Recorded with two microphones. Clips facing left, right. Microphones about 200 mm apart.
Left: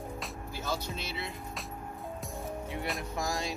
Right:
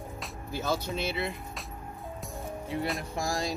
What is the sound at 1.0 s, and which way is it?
Speech, 55° right (ahead or behind).